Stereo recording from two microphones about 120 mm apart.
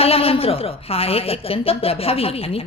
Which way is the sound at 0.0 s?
55° left (ahead or behind).